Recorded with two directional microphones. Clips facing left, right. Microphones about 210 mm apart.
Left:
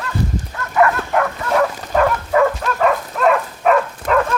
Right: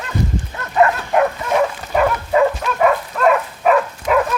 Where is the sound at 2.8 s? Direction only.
Centre (ahead or behind).